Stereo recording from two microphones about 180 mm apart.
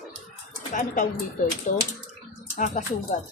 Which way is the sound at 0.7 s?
50° left (ahead or behind).